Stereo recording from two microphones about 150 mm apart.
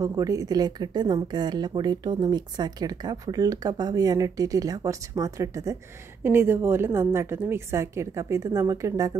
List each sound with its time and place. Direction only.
0.0 s a woman's voice: 20° right (ahead or behind)